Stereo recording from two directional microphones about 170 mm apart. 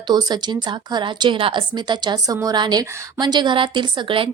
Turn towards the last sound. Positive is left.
turn(degrees=-30)  # may be behind; listen again after turning